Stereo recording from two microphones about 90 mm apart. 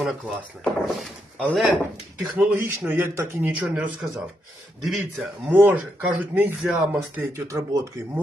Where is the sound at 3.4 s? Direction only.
15° right (ahead or behind).